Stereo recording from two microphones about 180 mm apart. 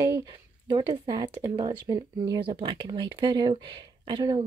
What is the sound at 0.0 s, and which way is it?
Speech, 20° right (ahead or behind).